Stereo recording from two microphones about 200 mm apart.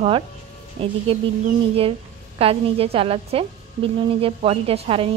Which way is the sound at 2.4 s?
30° right (ahead or behind).